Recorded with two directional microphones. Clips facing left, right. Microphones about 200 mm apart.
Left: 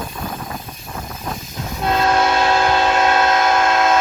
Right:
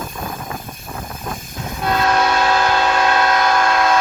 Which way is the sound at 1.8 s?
25° left (ahead or behind).